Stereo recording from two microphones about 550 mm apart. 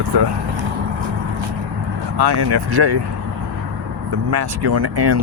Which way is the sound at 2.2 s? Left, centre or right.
Right.